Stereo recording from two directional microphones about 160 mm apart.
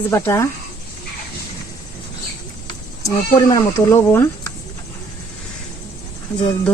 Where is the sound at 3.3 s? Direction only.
20° left (ahead or behind).